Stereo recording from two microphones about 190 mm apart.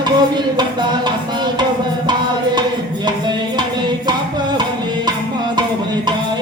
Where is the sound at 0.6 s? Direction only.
20° right (ahead or behind).